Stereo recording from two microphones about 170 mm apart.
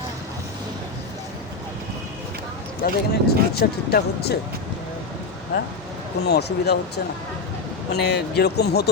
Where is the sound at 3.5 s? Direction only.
70° left (ahead or behind).